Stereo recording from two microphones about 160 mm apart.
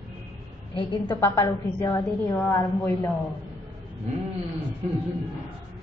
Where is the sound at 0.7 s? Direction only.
30° left (ahead or behind).